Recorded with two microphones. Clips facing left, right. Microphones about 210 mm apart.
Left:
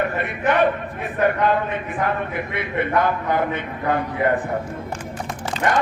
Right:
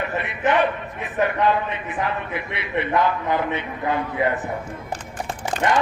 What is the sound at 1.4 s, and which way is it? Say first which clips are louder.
A man's voice: left 1 dB; 50° left (ahead or behind).